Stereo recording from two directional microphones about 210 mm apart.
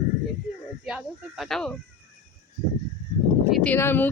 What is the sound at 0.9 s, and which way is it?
Speech, centre (ahead or behind).